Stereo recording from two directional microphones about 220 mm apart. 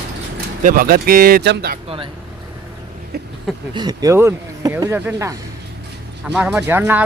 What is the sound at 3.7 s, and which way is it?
Speech, 20° right (ahead or behind).